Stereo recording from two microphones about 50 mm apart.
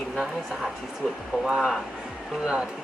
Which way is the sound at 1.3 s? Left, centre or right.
Right.